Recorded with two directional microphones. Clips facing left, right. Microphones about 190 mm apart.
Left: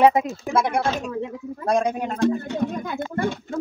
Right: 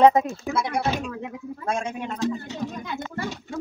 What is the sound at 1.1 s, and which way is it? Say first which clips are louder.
Speech: left 5 dB; 35° left (ahead or behind).